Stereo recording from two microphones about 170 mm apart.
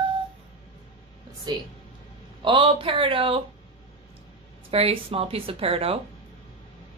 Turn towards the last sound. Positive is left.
turn(degrees=-35)  # may be behind; listen again after turning